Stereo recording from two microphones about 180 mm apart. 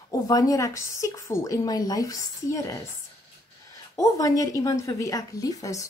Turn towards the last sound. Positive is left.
turn(degrees=20)  # may be behind; listen again after turning